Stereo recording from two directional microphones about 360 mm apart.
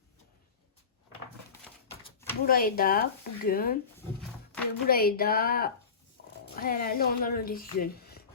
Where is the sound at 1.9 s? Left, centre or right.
Centre.